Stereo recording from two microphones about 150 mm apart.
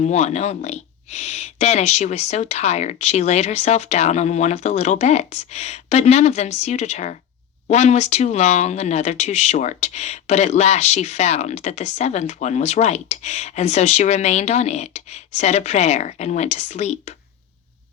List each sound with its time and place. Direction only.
0.0 s speech: 50° left (ahead or behind)